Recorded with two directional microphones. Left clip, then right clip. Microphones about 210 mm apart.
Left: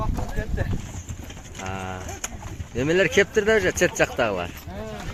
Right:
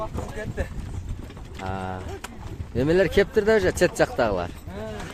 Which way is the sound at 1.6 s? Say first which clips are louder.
Right 1 dB; 15° right (ahead or behind).